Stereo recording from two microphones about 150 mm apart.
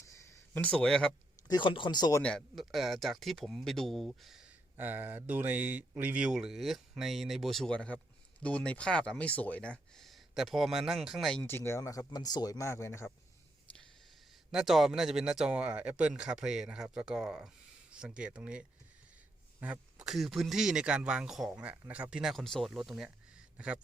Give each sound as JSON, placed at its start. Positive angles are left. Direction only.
{"t": 0.1, "sound": "a sound", "side_deg": 15}
{"t": 1.5, "sound": "speech", "side_deg": 30}
{"t": 2.2, "sound": "speech", "side_deg": 0}
{"t": 11.4, "sound": "speech", "side_deg": 15}
{"t": 14.5, "sound": "speech", "side_deg": 0}